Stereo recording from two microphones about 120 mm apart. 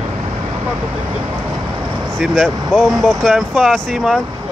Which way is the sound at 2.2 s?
Centre (ahead or behind).